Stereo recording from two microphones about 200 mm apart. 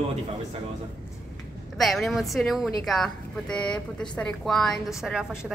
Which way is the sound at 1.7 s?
Centre (ahead or behind).